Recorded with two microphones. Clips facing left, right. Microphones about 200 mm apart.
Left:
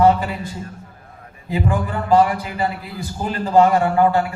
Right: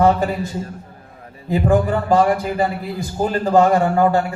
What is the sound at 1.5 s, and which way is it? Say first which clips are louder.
A man's voice: right 6 dB; 50° right (ahead or behind).